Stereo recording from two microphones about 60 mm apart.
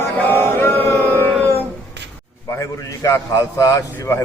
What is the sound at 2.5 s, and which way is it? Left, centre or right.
A man's voice, left.